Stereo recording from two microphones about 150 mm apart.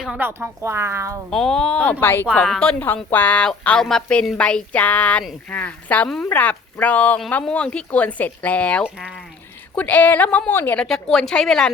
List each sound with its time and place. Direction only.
0.0 s speech: 5° right (ahead or behind)
0.3 s speech: 15° right (ahead or behind)
1.3 s a woman's voice: 5° left (ahead or behind)